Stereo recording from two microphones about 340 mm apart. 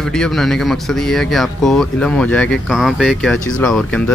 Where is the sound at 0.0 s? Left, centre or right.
Centre.